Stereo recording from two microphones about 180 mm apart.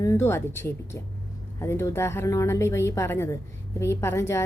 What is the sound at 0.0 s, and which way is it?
A woman's voice, 15° left (ahead or behind).